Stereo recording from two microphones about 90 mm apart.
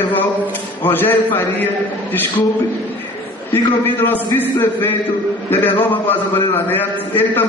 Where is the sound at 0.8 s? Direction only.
25° left (ahead or behind).